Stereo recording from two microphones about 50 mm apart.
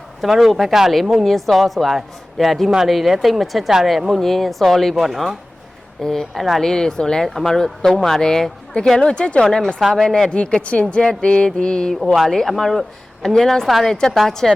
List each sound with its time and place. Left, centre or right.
0.2 s speech: centre
6.0 s speech: centre
10.2 s speech: centre
12.1 s speech: centre